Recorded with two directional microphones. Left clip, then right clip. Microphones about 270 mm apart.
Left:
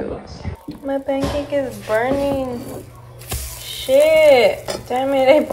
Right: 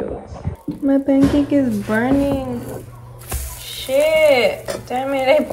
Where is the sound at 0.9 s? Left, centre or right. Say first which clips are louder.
Right 5 dB; right.